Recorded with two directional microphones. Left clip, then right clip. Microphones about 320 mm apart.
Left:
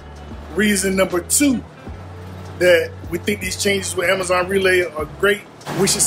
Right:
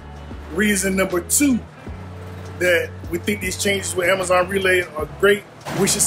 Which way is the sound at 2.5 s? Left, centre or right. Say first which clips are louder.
Left 4 dB; centre.